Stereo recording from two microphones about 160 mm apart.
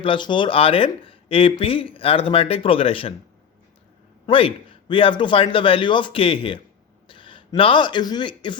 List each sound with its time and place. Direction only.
0.0 s speech: 30° left (ahead or behind)
4.3 s speech: 35° left (ahead or behind)